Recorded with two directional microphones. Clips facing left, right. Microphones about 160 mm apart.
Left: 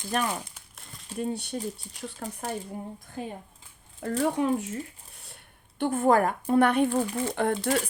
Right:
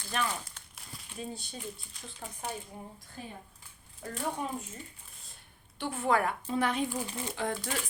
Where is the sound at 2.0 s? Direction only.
50° left (ahead or behind).